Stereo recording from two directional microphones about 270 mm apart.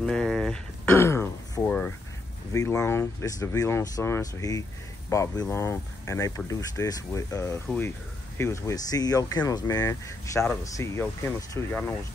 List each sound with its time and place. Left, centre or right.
0.0 s speech: centre